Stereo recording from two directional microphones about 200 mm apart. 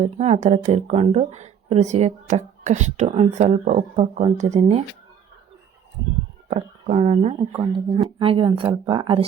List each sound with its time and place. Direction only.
0.0 s a woman's voice: 35° right (ahead or behind)
6.5 s a woman's voice: 35° right (ahead or behind)